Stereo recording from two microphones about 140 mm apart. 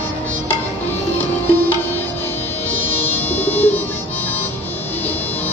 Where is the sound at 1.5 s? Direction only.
15° left (ahead or behind).